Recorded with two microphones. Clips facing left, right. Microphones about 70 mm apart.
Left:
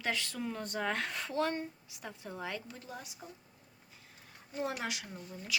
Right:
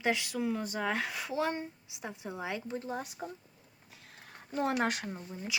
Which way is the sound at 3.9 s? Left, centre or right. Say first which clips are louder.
Right 6 dB; right.